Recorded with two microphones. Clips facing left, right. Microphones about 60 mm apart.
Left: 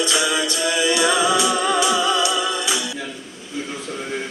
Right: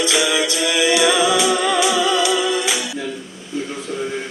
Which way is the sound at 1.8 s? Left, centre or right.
Right.